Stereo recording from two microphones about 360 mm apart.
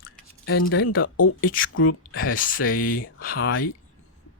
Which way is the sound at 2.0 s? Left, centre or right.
Left.